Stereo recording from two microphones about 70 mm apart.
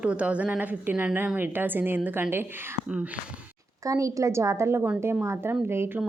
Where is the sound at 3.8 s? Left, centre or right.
Right.